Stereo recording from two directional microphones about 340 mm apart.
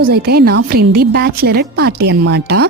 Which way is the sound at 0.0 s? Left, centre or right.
Right.